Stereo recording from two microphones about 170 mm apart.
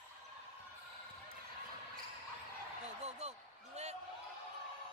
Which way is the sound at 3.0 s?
40° right (ahead or behind).